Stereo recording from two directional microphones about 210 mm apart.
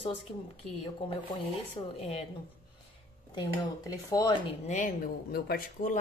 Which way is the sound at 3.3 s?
20° left (ahead or behind).